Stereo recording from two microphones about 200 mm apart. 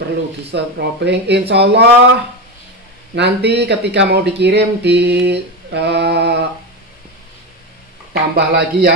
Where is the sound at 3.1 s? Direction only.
55° right (ahead or behind).